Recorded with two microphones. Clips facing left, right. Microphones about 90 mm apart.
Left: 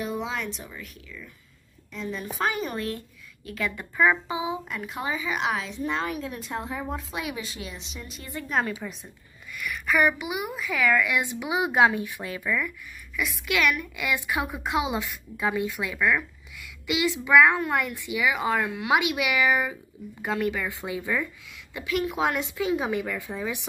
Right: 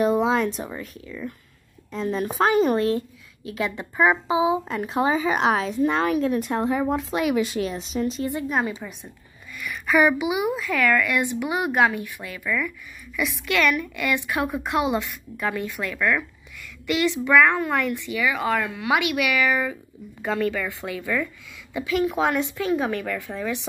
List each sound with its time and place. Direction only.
0.0 s speech: 40° right (ahead or behind)
3.4 s speech: 20° right (ahead or behind); by 5.9 s 45° right (ahead or behind)
5.9 s speech: 70° right (ahead or behind)
7.7 s speech: 40° right (ahead or behind)
8.3 s speech: 20° right (ahead or behind)
8.8 s a woman's voice: 5° right (ahead or behind); by 21.3 s 15° left (ahead or behind)
21.7 s a woman's voice: centre (ahead or behind)